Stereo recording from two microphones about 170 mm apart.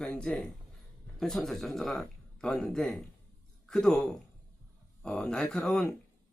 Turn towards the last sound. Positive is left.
turn(degrees=5)  # may be behind; listen again after turning